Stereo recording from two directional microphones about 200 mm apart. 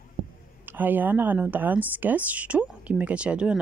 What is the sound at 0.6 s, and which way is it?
Speech, 10° right (ahead or behind).